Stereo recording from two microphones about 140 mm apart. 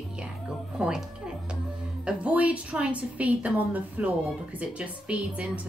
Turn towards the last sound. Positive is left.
turn(degrees=-10)  # may be behind; listen again after turning